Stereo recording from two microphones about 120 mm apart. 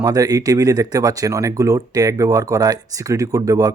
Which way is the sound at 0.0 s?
30° right (ahead or behind).